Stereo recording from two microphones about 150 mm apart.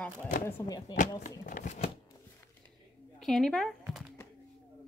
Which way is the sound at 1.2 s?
60° left (ahead or behind).